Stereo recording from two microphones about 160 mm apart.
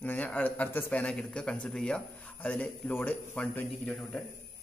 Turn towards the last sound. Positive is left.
turn(degrees=5)  # may be behind; listen again after turning